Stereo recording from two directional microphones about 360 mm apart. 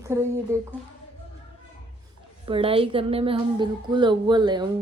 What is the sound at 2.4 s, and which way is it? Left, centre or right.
Speech, centre.